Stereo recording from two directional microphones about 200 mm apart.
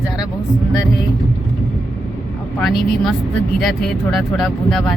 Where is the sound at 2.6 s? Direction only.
Centre (ahead or behind).